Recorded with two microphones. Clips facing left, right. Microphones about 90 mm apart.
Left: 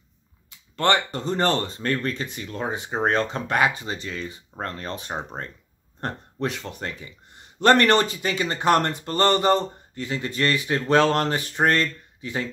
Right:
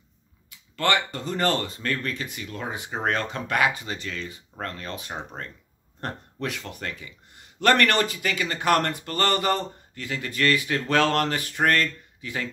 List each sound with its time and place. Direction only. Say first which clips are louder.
0.5 s speech: left 3 dB; 30° left (ahead or behind)